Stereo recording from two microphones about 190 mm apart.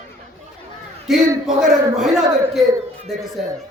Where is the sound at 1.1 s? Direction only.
Centre (ahead or behind).